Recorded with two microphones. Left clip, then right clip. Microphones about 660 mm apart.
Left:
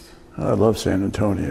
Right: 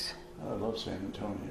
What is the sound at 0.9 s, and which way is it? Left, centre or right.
Speech, left.